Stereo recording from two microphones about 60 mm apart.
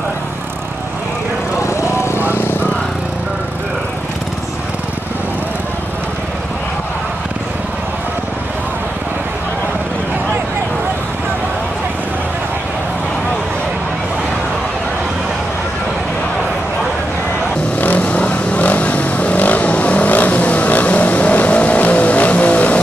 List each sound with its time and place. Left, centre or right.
1.6 s vehicle: left
17.7 s vehicle: left